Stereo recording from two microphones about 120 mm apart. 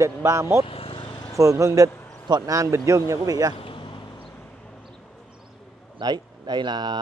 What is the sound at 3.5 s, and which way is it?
Vehicle, 45° left (ahead or behind).